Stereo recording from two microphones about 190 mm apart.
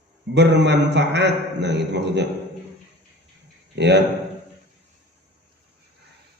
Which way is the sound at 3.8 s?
60° right (ahead or behind).